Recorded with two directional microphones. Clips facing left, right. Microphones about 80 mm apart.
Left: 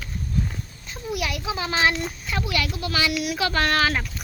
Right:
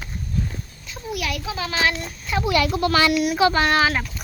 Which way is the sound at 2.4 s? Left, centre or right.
Right.